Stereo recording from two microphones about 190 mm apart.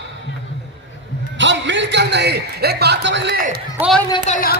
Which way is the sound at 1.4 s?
70° right (ahead or behind).